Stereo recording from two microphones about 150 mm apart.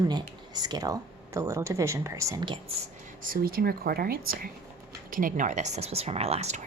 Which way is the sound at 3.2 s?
75° right (ahead or behind).